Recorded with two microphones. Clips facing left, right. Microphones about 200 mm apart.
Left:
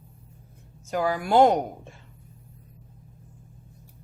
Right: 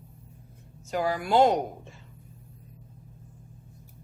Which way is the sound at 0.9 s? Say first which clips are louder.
Left 2 dB; 50° left (ahead or behind).